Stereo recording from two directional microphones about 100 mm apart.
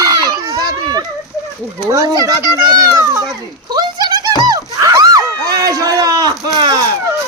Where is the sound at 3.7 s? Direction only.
45° right (ahead or behind).